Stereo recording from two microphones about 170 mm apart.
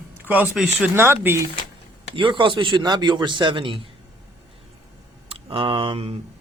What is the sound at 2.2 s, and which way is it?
A man's voice, 30° right (ahead or behind).